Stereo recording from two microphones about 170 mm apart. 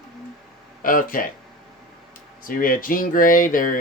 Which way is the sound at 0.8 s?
55° left (ahead or behind).